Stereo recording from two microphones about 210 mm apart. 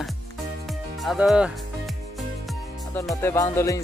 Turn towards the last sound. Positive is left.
turn(degrees=15)  # may be behind; listen again after turning